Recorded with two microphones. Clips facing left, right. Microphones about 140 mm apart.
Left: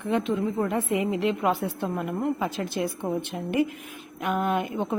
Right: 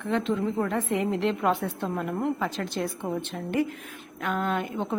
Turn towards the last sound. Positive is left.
turn(degrees=15)  # may be behind; listen again after turning